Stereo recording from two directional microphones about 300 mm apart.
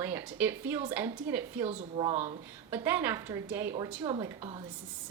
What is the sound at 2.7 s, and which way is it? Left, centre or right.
A woman's voice, centre.